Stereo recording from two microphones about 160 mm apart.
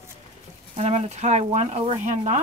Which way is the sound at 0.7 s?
45° right (ahead or behind).